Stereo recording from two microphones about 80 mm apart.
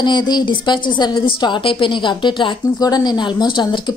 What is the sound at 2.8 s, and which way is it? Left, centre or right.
Speech, left.